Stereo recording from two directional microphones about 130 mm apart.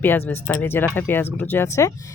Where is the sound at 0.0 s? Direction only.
15° left (ahead or behind).